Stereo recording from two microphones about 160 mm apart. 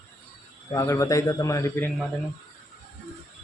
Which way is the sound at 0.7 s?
20° left (ahead or behind).